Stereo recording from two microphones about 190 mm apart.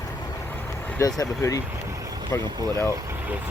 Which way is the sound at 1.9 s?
20° right (ahead or behind).